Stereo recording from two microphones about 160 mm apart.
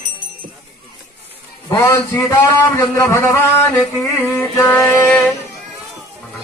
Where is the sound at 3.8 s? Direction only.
15° left (ahead or behind).